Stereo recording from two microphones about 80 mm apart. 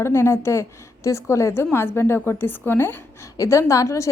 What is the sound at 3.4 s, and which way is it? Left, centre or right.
Speech, left.